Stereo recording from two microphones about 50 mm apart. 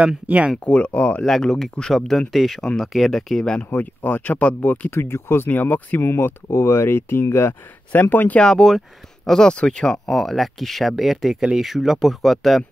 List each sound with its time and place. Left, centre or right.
0.0 s speech: right
0.7 s speech: left
1.2 s speech: centre
3.8 s speech: left
4.9 s speech: left
5.5 s speech: left
6.5 s speech: left
7.9 s speech: left
8.4 s speech: centre